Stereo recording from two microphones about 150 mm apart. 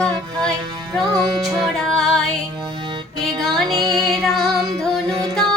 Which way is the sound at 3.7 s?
30° right (ahead or behind).